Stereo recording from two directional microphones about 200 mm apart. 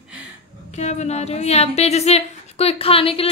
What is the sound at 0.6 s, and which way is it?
A woman's voice, 35° left (ahead or behind).